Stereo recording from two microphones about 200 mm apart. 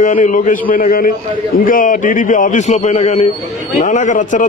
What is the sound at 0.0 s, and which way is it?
A man's voice, 40° left (ahead or behind).